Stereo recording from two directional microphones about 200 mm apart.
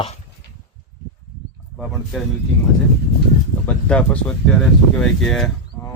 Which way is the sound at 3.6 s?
5° left (ahead or behind).